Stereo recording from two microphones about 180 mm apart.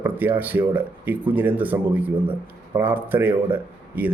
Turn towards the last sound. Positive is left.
turn(degrees=-10)  # may be behind; listen again after turning